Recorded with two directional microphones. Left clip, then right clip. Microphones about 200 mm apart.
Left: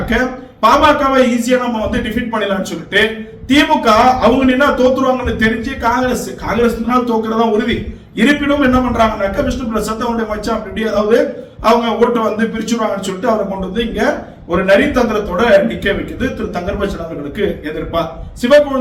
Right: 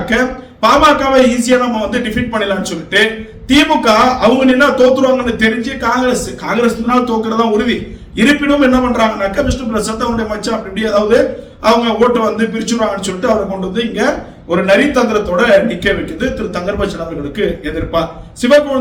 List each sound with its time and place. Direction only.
0.1 s a man's voice: 15° right (ahead or behind)
13.7 s a man's voice: 10° right (ahead or behind)